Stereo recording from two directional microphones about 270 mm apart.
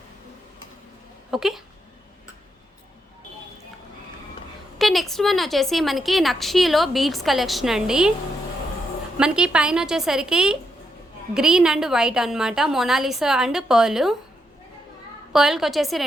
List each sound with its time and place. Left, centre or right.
1.3 s a woman's voice: centre
4.8 s a woman's voice: centre
9.1 s a woman's voice: centre
15.3 s a woman's voice: centre